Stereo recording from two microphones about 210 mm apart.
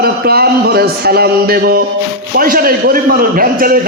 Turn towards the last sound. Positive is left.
turn(degrees=-40)  # may be behind; listen again after turning